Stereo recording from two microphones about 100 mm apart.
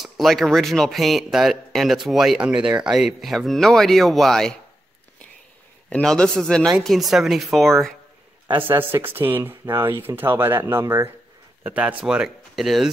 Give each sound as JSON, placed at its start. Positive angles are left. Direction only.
{"t": 0.0, "sound": "speech", "side_deg": 0}
{"t": 5.9, "sound": "a man's voice", "side_deg": 10}
{"t": 8.5, "sound": "speech", "side_deg": -20}